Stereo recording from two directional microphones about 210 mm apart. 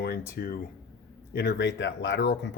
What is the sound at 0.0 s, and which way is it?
Speech, 50° left (ahead or behind).